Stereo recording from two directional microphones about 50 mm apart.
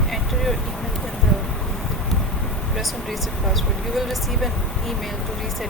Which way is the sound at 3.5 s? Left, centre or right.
Centre.